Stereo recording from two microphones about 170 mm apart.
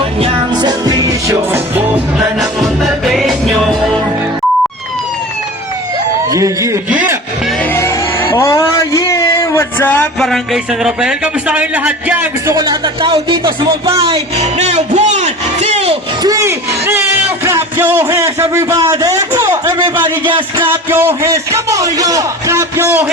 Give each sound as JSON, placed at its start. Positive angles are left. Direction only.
{"t": 0.2, "sound": "music", "side_deg": -25}
{"t": 2.1, "sound": "music", "side_deg": 0}
{"t": 6.3, "sound": "speech", "side_deg": -20}
{"t": 7.6, "sound": "music", "side_deg": 15}
{"t": 8.3, "sound": "a man's voice", "side_deg": 20}
{"t": 12.5, "sound": "speech", "side_deg": -25}
{"t": 16.2, "sound": "music", "side_deg": -20}
{"t": 20.7, "sound": "a man's voice", "side_deg": -15}